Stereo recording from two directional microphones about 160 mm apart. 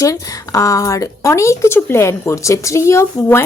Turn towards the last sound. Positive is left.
turn(degrees=15)  # may be behind; listen again after turning